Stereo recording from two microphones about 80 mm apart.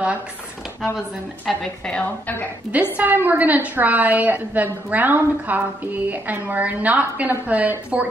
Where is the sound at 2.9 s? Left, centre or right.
Right.